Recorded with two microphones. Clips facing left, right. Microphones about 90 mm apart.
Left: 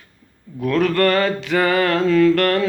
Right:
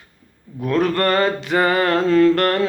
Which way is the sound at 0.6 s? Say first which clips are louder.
Left 1 dB; 20° right (ahead or behind).